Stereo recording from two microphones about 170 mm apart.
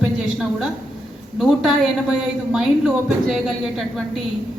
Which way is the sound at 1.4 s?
Centre (ahead or behind).